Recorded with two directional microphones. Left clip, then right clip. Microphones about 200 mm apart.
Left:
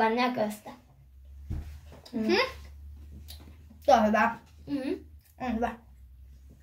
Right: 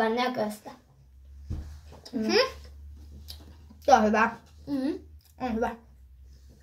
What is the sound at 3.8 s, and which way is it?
Speech, 25° right (ahead or behind).